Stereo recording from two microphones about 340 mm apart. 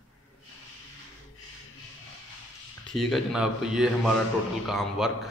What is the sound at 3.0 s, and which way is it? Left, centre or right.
Speech, centre.